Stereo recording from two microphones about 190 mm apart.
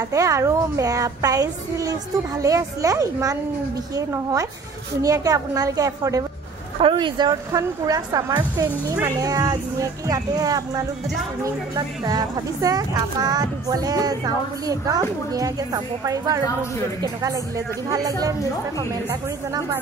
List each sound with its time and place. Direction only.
0.1 s a woman's voice: 15° right (ahead or behind)